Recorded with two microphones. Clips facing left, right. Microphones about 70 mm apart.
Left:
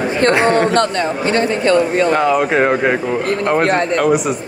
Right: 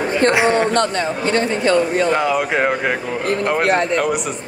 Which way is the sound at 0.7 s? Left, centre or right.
Left.